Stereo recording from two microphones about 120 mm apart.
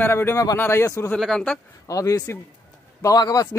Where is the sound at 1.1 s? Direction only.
5° left (ahead or behind).